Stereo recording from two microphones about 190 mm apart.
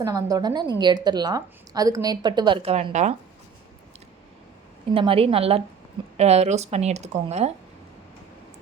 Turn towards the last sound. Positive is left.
turn(degrees=-35)  # may be behind; listen again after turning